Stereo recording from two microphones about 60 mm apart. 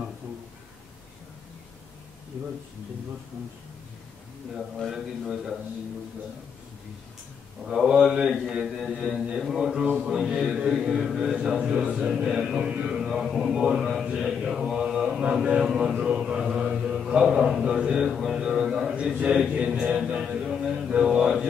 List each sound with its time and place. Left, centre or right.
4.7 s a man's voice: centre
7.6 s speech: centre
14.0 s mantra: centre
18.9 s a sound: centre
19.5 s music: right
19.8 s mantra: centre